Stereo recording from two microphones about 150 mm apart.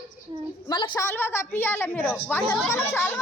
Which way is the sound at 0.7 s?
30° left (ahead or behind).